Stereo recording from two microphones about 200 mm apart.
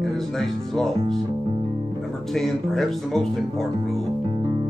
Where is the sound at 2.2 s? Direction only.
Centre (ahead or behind).